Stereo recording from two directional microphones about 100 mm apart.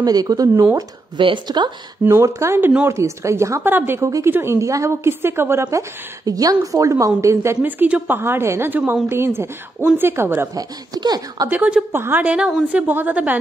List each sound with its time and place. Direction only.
0.0 s speech: 40° right (ahead or behind)
1.1 s speech: 50° right (ahead or behind)
2.0 s a woman's voice: 30° right (ahead or behind)
7.6 s a woman's voice: 15° right (ahead or behind)
10.5 s speech: 40° right (ahead or behind)
11.4 s a woman's voice: 15° right (ahead or behind)